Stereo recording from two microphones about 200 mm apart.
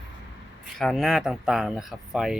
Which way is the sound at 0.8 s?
Centre (ahead or behind).